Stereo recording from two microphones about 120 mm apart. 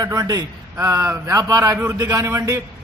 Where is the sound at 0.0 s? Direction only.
30° right (ahead or behind).